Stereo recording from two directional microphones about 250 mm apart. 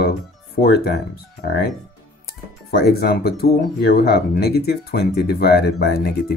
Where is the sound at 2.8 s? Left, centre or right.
Left.